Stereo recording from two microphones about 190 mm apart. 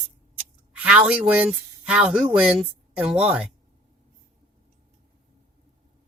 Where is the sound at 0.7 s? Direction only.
5° right (ahead or behind).